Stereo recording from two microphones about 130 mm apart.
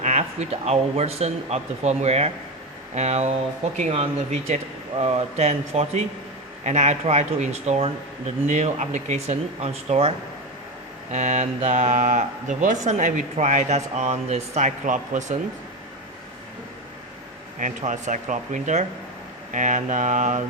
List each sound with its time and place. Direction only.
0.0 s speech: 60° right (ahead or behind)
11.1 s speech: 65° right (ahead or behind)
17.6 s speech: 70° right (ahead or behind)